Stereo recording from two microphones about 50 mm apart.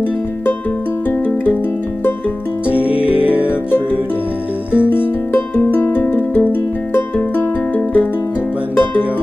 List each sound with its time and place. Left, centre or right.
2.9 s music: right
4.7 s music: left